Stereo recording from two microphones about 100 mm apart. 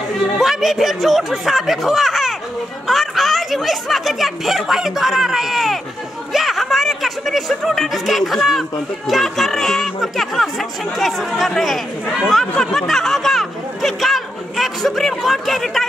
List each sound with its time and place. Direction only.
0.4 s speech: 5° right (ahead or behind)